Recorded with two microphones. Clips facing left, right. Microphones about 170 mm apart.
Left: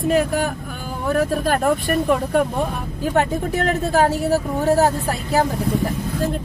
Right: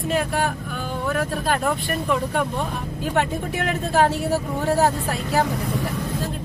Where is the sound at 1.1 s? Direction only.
45° left (ahead or behind).